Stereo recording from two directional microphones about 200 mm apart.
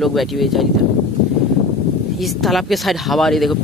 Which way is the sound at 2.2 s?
Centre (ahead or behind).